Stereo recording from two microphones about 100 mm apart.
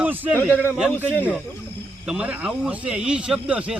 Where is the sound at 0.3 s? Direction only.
15° left (ahead or behind).